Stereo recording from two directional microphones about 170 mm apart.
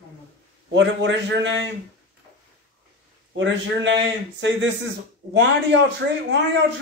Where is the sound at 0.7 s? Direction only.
90° right.